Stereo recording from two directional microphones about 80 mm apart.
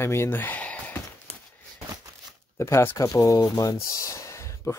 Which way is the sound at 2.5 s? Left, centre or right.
Left.